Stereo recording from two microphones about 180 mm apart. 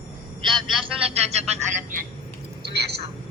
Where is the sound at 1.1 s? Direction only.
35° right (ahead or behind).